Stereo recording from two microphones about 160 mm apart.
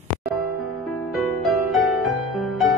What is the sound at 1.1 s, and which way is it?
Music, centre (ahead or behind).